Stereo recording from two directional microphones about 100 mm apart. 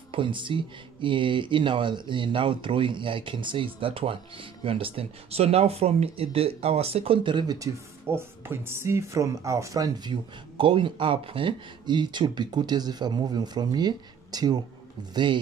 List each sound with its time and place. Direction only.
0.1 s speech: 55° right (ahead or behind); by 7.2 s 85° right
7.2 s speech: 50° right (ahead or behind)
7.5 s speech: 30° right (ahead or behind)
10.6 s speech: 55° right (ahead or behind)